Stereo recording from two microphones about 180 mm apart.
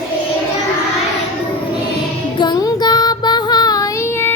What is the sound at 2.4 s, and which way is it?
Music, 20° left (ahead or behind).